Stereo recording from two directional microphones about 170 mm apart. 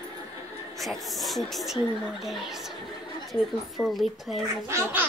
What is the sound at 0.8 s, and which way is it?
Speech, centre (ahead or behind).